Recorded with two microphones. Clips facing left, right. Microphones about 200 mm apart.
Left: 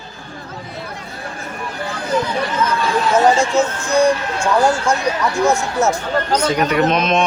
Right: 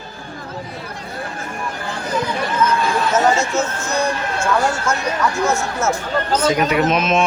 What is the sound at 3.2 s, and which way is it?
Speech, 30° left (ahead or behind).